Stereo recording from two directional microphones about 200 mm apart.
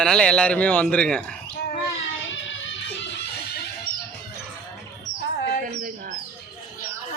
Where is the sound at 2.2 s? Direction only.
70° left (ahead or behind).